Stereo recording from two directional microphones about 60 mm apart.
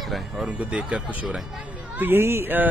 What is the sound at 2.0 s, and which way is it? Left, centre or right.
Speech, right.